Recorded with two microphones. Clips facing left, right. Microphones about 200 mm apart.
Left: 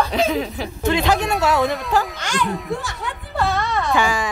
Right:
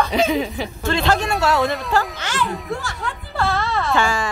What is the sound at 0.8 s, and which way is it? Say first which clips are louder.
Speech: left 1 dB; 15° left (ahead or behind).